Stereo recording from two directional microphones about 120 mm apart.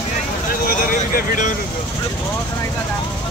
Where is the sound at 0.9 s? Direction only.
90° left.